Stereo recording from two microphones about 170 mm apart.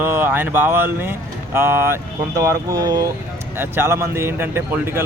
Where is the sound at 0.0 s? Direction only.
10° right (ahead or behind).